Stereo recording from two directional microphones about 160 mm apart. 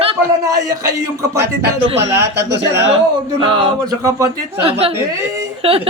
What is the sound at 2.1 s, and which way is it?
Speech, 90° right.